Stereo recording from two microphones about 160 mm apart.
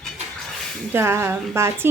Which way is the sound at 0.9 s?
15° right (ahead or behind).